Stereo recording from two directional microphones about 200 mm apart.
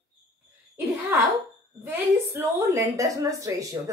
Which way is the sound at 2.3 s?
15° right (ahead or behind).